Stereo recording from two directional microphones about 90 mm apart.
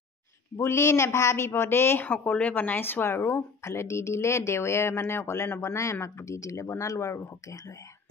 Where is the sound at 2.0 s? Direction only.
15° left (ahead or behind); by 7.7 s 35° left (ahead or behind).